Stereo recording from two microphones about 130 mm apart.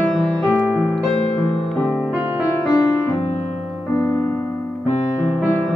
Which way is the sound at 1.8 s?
5° left (ahead or behind).